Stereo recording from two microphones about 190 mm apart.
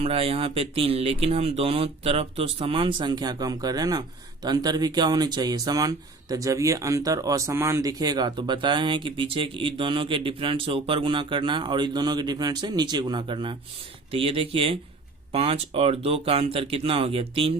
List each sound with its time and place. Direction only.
0.0 s speech: 30° right (ahead or behind)